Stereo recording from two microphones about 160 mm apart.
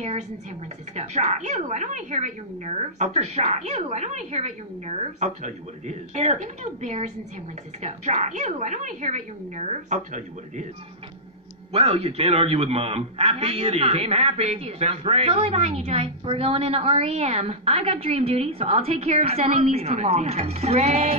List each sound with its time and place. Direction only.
0.9 s speech: 45° right (ahead or behind)
11.7 s a man's voice: 40° right (ahead or behind)